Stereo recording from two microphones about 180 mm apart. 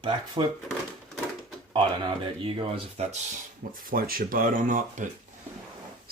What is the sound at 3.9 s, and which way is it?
Speech, 55° right (ahead or behind).